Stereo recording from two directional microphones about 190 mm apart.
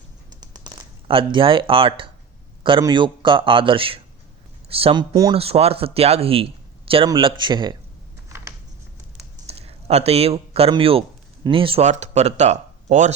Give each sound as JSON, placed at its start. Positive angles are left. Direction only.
{"t": 0.3, "sound": "a sound", "side_deg": -20}
{"t": 2.6, "sound": "speech", "side_deg": -25}
{"t": 9.5, "sound": "speech", "side_deg": -30}